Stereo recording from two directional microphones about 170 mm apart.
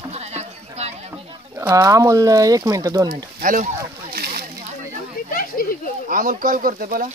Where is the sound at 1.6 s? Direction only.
15° right (ahead or behind).